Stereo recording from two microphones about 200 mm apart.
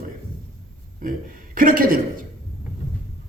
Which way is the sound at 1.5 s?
45° right (ahead or behind).